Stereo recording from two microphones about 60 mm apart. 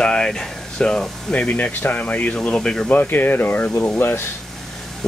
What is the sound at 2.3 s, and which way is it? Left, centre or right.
Speech, centre.